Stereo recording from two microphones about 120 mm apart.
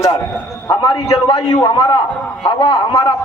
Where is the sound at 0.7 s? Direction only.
40° left (ahead or behind).